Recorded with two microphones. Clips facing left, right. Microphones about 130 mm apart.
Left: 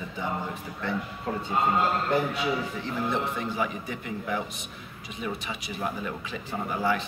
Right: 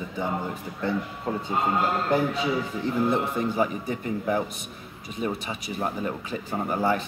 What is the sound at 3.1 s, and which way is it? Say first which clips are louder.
A man's voice: right 4 dB; 40° right (ahead or behind).